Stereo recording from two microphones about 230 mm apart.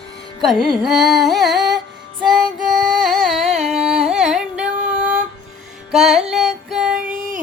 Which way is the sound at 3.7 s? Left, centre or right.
Centre.